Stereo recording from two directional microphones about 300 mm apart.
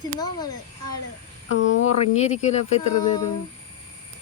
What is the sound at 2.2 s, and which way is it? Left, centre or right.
Speech, left.